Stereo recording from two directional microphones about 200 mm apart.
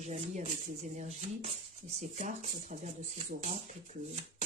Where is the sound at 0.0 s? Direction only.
35° right (ahead or behind).